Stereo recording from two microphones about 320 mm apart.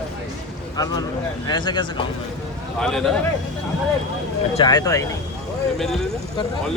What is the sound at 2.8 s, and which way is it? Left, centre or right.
Speech, centre.